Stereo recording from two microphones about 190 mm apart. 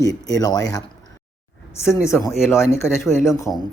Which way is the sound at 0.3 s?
20° left (ahead or behind).